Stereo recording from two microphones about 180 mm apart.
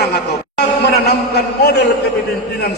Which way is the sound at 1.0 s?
65° left (ahead or behind).